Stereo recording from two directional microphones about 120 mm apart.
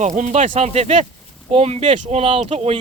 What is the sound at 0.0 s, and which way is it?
Speech, 90° right.